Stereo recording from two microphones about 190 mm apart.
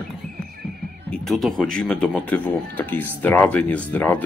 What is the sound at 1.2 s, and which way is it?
Speech, centre (ahead or behind).